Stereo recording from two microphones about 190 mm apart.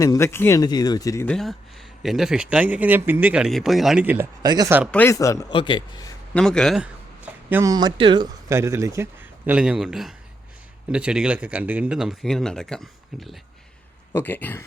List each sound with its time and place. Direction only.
0.0 s speech: 15° left (ahead or behind)
1.3 s speech: centre (ahead or behind)
4.4 s speech: 20° right (ahead or behind)
4.9 s a man's voice: 10° left (ahead or behind)
6.3 s speech: 5° left (ahead or behind)
7.5 s a man's voice: 15° right (ahead or behind)
9.5 s speech: 5° right (ahead or behind)
14.1 s speech: 10° left (ahead or behind)